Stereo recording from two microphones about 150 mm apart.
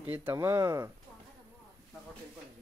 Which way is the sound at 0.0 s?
15° right (ahead or behind).